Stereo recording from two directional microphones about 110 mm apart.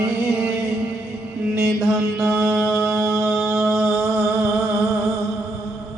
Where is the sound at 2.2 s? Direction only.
20° right (ahead or behind).